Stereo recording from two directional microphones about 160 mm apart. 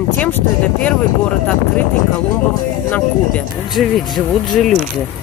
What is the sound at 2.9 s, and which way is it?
Speech, 5° left (ahead or behind).